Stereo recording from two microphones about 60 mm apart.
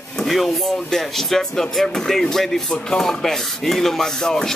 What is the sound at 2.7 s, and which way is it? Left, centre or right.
Rub, centre.